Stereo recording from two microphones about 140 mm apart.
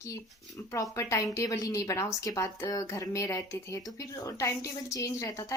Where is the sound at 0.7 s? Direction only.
20° left (ahead or behind).